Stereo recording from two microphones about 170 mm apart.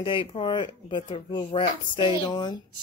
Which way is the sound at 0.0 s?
30° left (ahead or behind).